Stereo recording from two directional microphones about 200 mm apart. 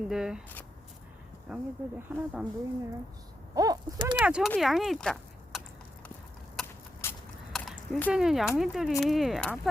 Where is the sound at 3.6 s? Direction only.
20° right (ahead or behind).